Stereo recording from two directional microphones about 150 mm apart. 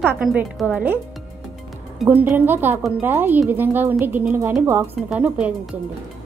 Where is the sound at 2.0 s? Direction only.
10° right (ahead or behind).